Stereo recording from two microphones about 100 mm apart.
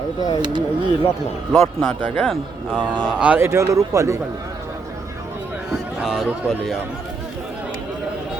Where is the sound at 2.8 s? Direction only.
50° right (ahead or behind).